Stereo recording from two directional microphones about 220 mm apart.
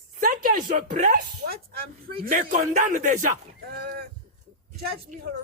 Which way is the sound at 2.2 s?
35° right (ahead or behind).